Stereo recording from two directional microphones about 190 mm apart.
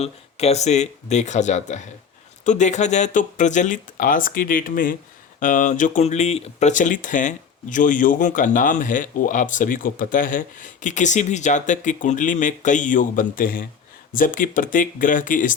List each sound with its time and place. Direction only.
0.0 s speech: 35° left (ahead or behind)